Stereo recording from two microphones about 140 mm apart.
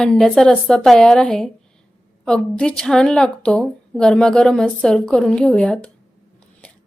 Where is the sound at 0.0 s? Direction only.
5° left (ahead or behind).